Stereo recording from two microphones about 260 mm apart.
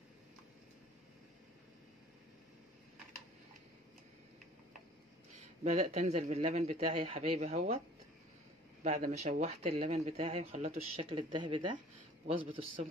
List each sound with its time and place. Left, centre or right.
5.6 s speech: right
8.8 s speech: right